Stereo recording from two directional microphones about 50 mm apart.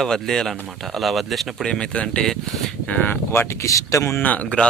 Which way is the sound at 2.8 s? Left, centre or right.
Left.